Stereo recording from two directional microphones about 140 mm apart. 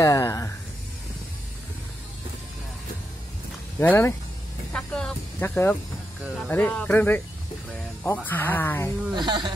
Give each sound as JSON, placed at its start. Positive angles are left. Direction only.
{"t": 0.0, "sound": "a sound", "side_deg": 25}
{"t": 3.8, "sound": "speech", "side_deg": 15}
{"t": 4.7, "sound": "vehicle", "side_deg": 5}
{"t": 5.4, "sound": "speech", "side_deg": 15}
{"t": 6.2, "sound": "speech", "side_deg": 0}
{"t": 6.5, "sound": "speech", "side_deg": 10}
{"t": 9.1, "sound": "speech", "side_deg": -30}